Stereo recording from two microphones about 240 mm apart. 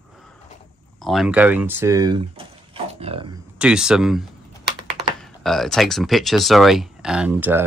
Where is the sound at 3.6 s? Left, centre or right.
Centre.